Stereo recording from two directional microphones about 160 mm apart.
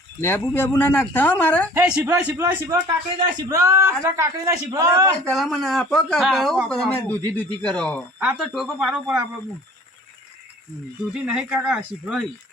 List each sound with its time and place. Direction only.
0.2 s speech: 15° left (ahead or behind)
1.9 s a man's voice: 5° right (ahead or behind)
5.2 s speech: 5° left (ahead or behind)
8.2 s a man's voice: 5° right (ahead or behind)
11.1 s speech: 5° right (ahead or behind)